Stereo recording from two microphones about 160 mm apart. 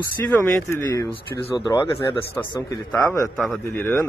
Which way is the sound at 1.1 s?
35° left (ahead or behind).